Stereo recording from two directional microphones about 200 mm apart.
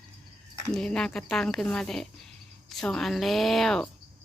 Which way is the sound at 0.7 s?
5° left (ahead or behind).